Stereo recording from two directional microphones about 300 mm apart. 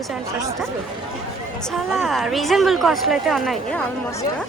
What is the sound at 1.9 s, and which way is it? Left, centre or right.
Speech, centre.